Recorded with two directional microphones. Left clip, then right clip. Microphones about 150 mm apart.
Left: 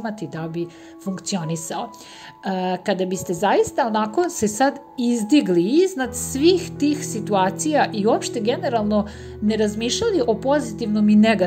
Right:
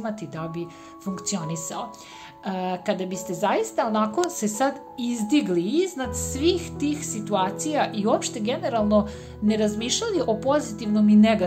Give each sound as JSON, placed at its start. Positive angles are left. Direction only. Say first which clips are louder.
{"t": 0.0, "sound": "a woman's voice", "louder": "left 2 dB", "side_deg": 25}
{"t": 11.1, "sound": "a woman's voice", "louder": "left 2 dB", "side_deg": 30}